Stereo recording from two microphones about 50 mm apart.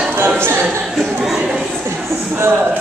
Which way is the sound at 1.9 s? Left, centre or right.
Right.